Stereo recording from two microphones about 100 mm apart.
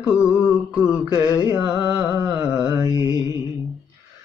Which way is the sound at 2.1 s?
30° right (ahead or behind).